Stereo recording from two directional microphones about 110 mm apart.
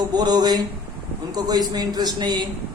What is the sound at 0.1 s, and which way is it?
Speech, 40° right (ahead or behind).